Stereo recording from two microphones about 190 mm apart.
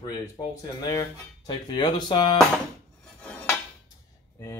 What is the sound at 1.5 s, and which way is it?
Speech, 25° left (ahead or behind).